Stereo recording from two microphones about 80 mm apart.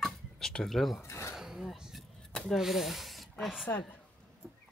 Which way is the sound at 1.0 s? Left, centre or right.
Left.